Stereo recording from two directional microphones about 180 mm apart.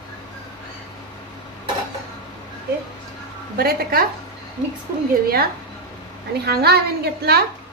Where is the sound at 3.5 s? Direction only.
60° right (ahead or behind).